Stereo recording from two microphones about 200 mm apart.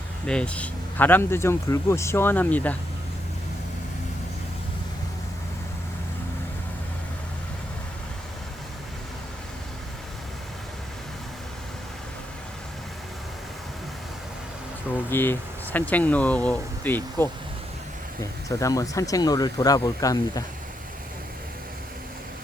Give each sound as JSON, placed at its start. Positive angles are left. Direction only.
{"t": 0.3, "sound": "speech", "side_deg": 5}
{"t": 15.1, "sound": "speech", "side_deg": 10}